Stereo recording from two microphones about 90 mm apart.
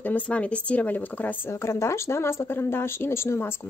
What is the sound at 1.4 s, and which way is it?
Speech, 30° left (ahead or behind).